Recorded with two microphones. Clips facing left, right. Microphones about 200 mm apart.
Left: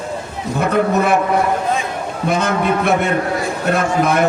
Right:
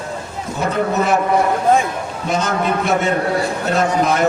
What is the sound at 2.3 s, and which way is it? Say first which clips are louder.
A man's voice: left 2 dB; 55° left (ahead or behind).